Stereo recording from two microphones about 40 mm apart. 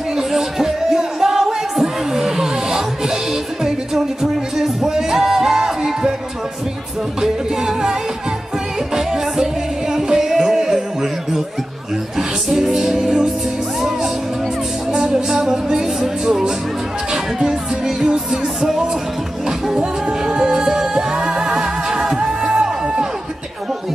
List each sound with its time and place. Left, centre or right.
0.1 s music: centre
7.2 s music: centre
12.4 s music: centre